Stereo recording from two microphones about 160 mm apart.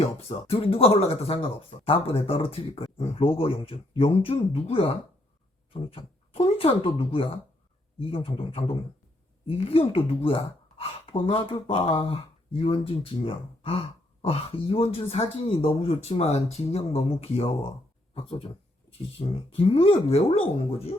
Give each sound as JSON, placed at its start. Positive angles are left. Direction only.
{"t": 0.0, "sound": "speech", "side_deg": 40}
{"t": 18.1, "sound": "a sound", "side_deg": 35}
{"t": 19.5, "sound": "speech", "side_deg": 35}